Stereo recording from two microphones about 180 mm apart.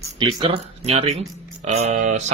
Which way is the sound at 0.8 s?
35° right (ahead or behind).